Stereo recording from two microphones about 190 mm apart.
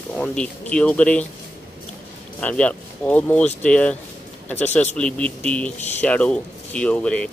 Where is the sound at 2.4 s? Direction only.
5° left (ahead or behind).